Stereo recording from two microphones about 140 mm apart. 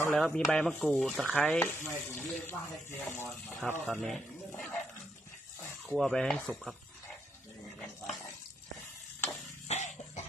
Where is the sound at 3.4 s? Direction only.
10° left (ahead or behind).